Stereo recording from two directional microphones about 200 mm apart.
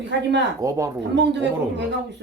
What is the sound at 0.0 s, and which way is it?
Speech, 60° right (ahead or behind).